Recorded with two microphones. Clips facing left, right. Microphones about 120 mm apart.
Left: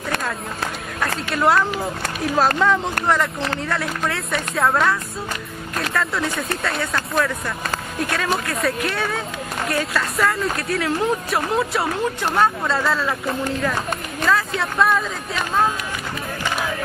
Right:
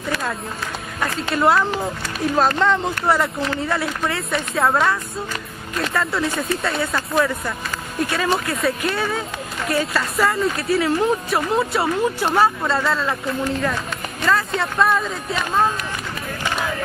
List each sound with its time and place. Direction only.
1.3 s speech: centre (ahead or behind)
5.9 s speech: centre (ahead or behind)
14.2 s speech: centre (ahead or behind)